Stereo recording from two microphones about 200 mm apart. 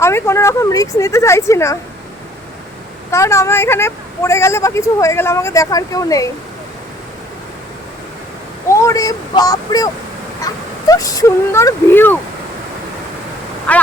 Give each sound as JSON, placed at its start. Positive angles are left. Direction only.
{"t": 0.0, "sound": "a woman's voice", "side_deg": 15}
{"t": 3.1, "sound": "a woman's voice", "side_deg": 15}
{"t": 8.7, "sound": "a woman's voice", "side_deg": 15}
{"t": 13.7, "sound": "quack", "side_deg": 5}